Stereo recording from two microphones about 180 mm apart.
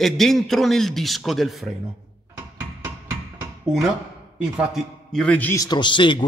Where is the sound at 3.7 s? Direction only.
Centre (ahead or behind); by 6.3 s 25° left (ahead or behind).